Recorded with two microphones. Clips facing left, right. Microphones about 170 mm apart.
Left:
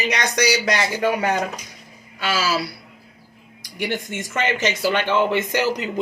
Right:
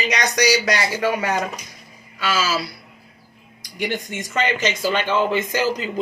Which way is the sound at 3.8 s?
15° right (ahead or behind).